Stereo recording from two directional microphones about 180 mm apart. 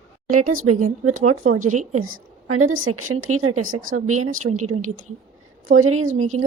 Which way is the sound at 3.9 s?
45° right (ahead or behind).